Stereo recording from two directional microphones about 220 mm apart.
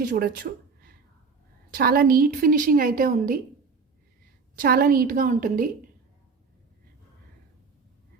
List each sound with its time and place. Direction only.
0.0 s a woman's voice: 40° right (ahead or behind)
4.5 s a woman's voice: 40° right (ahead or behind)